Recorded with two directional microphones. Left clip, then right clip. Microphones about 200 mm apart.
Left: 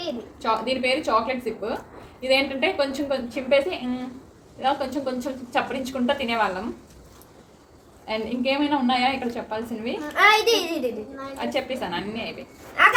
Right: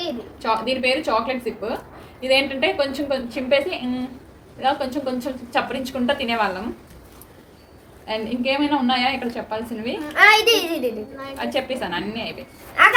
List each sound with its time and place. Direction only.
0.4 s a woman's voice: centre (ahead or behind)
8.0 s a woman's voice: centre (ahead or behind)
10.2 s a child's voice: 15° right (ahead or behind)
11.3 s a woman's voice: centre (ahead or behind)
12.8 s a child's voice: 15° right (ahead or behind)